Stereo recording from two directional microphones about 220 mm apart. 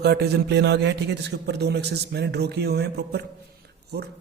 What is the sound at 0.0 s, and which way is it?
A man's voice, 45° right (ahead or behind).